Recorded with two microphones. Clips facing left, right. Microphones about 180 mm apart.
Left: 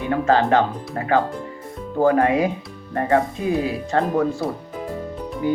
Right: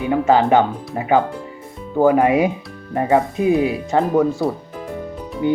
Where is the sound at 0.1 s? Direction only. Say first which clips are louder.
Right 3 dB; 15° right (ahead or behind).